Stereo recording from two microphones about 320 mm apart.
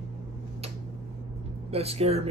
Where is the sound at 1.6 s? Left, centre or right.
Centre.